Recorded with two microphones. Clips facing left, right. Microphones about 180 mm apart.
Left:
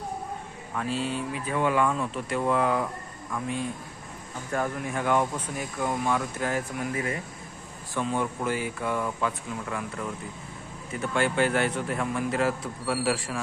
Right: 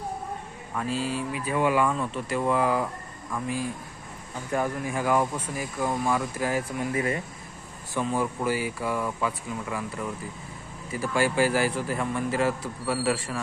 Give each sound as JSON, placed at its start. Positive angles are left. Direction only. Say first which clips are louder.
{"t": 0.7, "sound": "speech", "louder": "right 1 dB", "side_deg": 0}
{"t": 4.8, "sound": "speech", "louder": "left 1 dB", "side_deg": -5}
{"t": 6.9, "sound": "speech", "louder": "right 4 dB", "side_deg": -30}
{"t": 8.0, "sound": "speech", "louder": "right 1 dB", "side_deg": -5}